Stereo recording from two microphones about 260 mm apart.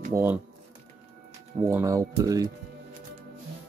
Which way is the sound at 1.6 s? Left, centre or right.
Centre.